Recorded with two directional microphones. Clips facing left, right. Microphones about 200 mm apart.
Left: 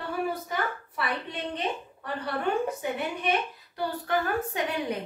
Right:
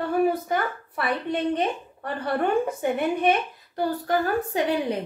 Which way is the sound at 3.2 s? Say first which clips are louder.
Right 6 dB; 50° right (ahead or behind).